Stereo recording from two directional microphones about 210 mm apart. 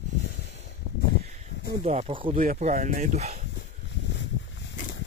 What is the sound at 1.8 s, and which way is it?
Speech, 30° right (ahead or behind).